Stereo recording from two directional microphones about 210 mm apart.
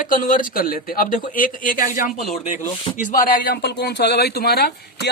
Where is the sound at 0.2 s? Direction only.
40° left (ahead or behind).